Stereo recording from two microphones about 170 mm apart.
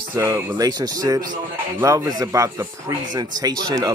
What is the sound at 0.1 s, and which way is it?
A man's voice, 20° right (ahead or behind).